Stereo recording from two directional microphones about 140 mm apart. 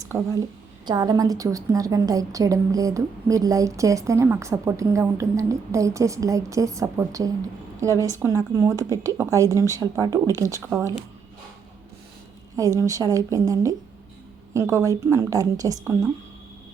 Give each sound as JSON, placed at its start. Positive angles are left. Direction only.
{"t": 0.1, "sound": "a woman's voice", "side_deg": -20}
{"t": 10.6, "sound": "speech", "side_deg": -10}
{"t": 12.5, "sound": "a woman's voice", "side_deg": -25}